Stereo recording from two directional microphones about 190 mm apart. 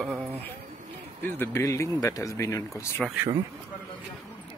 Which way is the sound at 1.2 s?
10° left (ahead or behind).